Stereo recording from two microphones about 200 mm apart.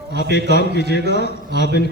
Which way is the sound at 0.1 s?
55° left (ahead or behind).